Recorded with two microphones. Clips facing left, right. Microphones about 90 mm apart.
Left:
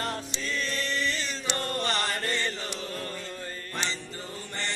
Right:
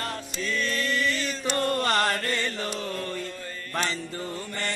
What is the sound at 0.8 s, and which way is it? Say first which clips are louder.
Chant: right 3 dB; 45° right (ahead or behind).